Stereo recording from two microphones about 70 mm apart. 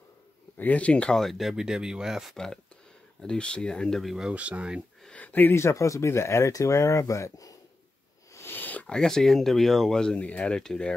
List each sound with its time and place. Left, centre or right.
0.6 s speech: left
1.1 s speech: centre
1.5 s speech: centre
2.3 s speech: centre
4.0 s speech: centre
4.3 s speech: centre
5.1 s speech: left
8.3 s a sound: left
8.5 s a sound: left
8.9 s speech: centre